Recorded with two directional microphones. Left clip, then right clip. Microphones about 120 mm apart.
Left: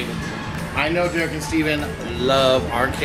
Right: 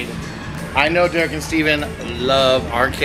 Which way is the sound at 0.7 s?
20° right (ahead or behind).